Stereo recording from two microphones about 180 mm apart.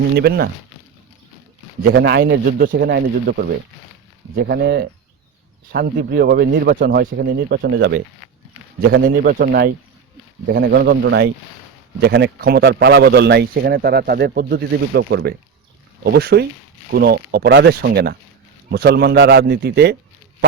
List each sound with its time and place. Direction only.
0.2 s a man's voice: 65° right (ahead or behind)
1.9 s a man's voice: 70° right (ahead or behind)
9.0 s a man's voice: 55° right (ahead or behind)